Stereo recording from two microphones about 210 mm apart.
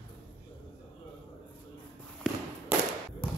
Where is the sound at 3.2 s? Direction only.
25° left (ahead or behind).